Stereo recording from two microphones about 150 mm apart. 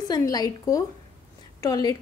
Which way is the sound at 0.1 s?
25° left (ahead or behind).